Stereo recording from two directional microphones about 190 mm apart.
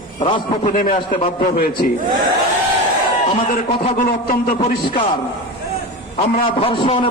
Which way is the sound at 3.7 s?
40° left (ahead or behind).